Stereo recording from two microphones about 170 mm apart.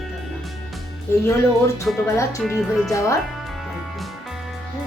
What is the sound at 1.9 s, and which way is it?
Speech, 5° left (ahead or behind).